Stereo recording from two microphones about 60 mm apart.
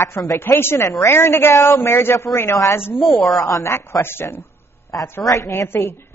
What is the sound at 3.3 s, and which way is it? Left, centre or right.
Speech, left.